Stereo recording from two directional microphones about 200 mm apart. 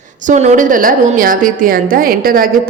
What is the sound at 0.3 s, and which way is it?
A woman's voice, 35° right (ahead or behind).